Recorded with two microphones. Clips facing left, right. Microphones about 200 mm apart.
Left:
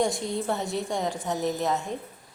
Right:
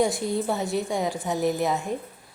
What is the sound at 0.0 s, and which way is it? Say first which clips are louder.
A woman's voice: right 3 dB; 5° right (ahead or behind).